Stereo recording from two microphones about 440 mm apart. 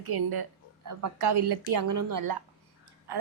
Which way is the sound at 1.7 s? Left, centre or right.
Right.